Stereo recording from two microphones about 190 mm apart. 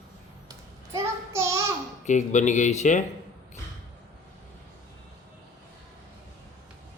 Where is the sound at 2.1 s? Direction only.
40° left (ahead or behind).